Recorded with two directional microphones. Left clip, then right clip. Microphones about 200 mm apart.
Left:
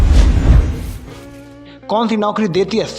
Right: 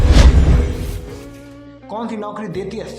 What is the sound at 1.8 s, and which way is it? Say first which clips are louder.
Speech: left 10 dB; 35° left (ahead or behind).